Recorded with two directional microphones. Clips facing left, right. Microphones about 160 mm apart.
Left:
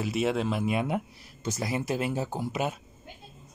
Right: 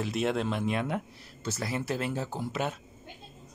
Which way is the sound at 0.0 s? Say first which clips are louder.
Left 2 dB; 5° left (ahead or behind).